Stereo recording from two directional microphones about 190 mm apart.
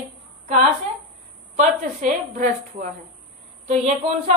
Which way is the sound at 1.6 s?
45° right (ahead or behind).